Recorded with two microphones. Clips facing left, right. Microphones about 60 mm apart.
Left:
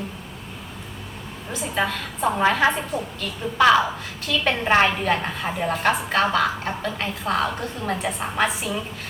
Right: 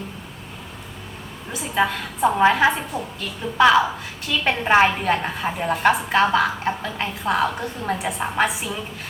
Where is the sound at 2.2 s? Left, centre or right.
Centre.